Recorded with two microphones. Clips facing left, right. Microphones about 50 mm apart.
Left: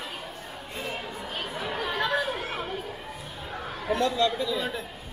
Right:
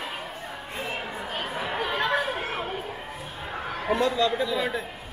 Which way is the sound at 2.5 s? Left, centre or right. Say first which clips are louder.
Right 2 dB; right.